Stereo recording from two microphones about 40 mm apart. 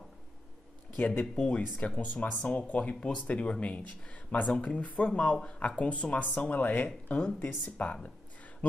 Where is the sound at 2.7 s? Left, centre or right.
Left.